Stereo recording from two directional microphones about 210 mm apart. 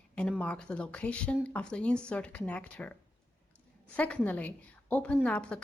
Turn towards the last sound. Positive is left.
turn(degrees=5)  # may be behind; listen again after turning